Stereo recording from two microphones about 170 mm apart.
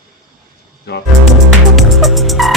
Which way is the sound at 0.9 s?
70° left (ahead or behind).